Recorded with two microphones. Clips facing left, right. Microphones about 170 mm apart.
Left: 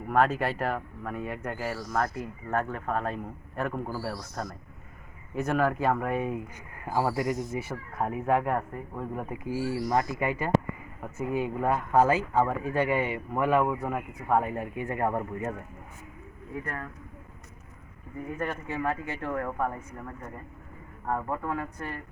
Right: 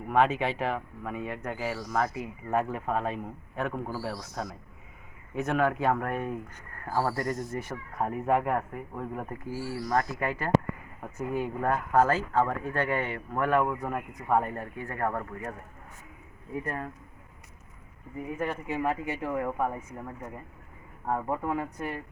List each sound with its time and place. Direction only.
0.1 s speech: centre (ahead or behind)
9.3 s speech: 15° left (ahead or behind)
14.5 s speech: 15° left (ahead or behind)
16.6 s speech: 25° right (ahead or behind)
18.3 s speech: 10° right (ahead or behind)